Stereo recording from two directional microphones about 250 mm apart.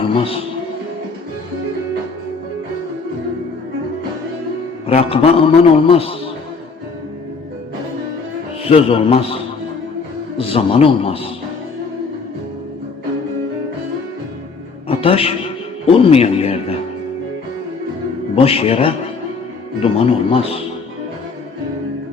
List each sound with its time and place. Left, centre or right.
0.0 s a sound: left
4.9 s a man's voice: left
8.7 s a man's voice: left
14.8 s music: left
15.9 s a man's voice: left
18.3 s a man's voice: left